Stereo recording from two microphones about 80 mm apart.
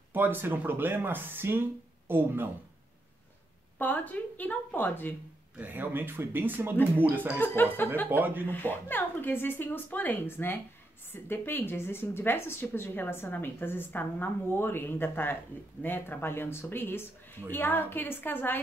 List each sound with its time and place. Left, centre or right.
0.1 s speech: right
3.7 s a woman's voice: left
5.6 s speech: right
7.3 s a woman's voice: left
8.1 s speech: right
8.5 s a woman's voice: left